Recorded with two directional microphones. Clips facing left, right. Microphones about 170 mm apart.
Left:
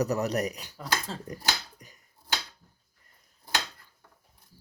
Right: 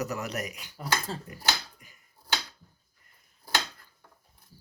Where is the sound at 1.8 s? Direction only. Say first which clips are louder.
Left 5 dB; 40° left (ahead or behind).